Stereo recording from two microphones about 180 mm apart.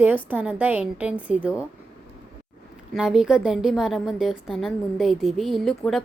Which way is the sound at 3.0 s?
5° right (ahead or behind).